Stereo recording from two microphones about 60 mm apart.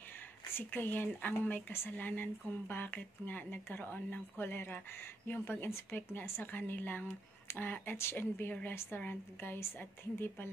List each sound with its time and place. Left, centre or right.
0.5 s speech: left